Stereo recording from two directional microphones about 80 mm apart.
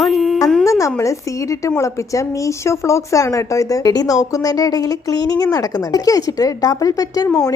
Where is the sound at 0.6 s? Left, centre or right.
Left.